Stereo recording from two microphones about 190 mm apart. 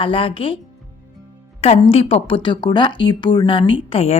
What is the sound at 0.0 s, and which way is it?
Speech, 30° left (ahead or behind).